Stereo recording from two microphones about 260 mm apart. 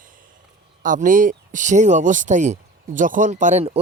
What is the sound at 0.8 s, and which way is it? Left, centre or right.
Speech, right.